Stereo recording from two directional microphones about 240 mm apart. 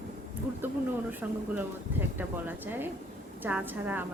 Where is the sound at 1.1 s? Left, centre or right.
Centre.